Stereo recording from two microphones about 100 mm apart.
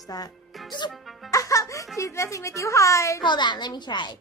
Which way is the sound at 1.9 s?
30° left (ahead or behind).